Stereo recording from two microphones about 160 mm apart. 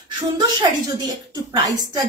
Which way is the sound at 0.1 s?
25° right (ahead or behind).